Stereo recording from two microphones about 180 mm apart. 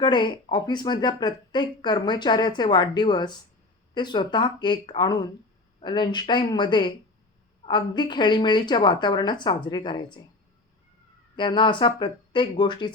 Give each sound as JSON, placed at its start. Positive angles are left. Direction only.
{"t": 0.0, "sound": "speech", "side_deg": 25}
{"t": 11.3, "sound": "speech", "side_deg": 25}